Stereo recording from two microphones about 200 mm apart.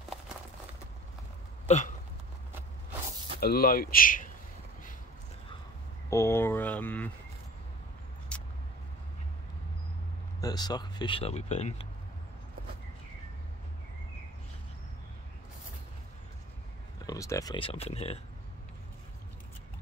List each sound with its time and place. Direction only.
1.7 s hiccup: 35° left (ahead or behind)
3.3 s speech: 50° left (ahead or behind)
6.0 s speech: 15° left (ahead or behind)
8.3 s vehicle: 5° left (ahead or behind)
10.4 s speech: 20° left (ahead or behind)
17.0 s speech: 15° left (ahead or behind)